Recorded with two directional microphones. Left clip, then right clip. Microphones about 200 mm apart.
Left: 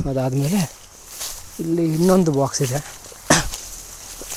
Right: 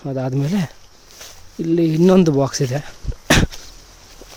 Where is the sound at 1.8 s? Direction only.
35° right (ahead or behind).